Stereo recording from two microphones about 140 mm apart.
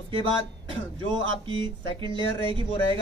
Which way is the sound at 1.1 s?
35° right (ahead or behind).